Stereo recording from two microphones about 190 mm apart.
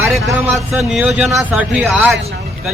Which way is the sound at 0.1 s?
Centre (ahead or behind).